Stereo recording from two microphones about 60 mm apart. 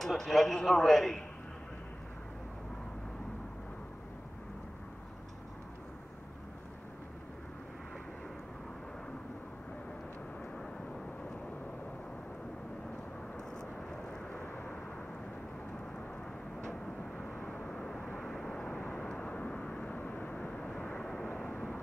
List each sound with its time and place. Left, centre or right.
0.0 s a man's voice: centre
13.4 s vehicle: centre
14.3 s vehicle: left
16.6 s vehicle: centre
17.6 s vehicle: centre